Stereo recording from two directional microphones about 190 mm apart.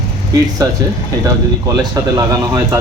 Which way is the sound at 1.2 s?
15° right (ahead or behind).